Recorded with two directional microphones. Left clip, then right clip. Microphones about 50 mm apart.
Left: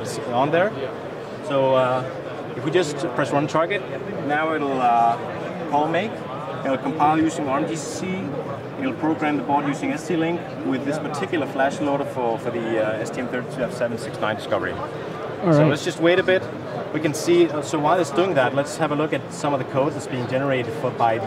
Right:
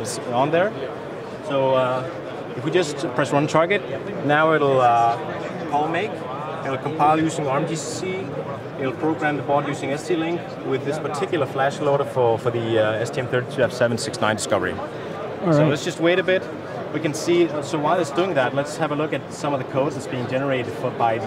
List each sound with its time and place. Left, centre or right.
0.3 s speech: centre
2.6 s speech: centre
4.3 s speech: centre
8.8 s speech: centre
15.4 s speech: centre